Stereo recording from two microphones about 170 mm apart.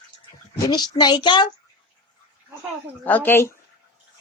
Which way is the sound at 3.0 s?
10° left (ahead or behind).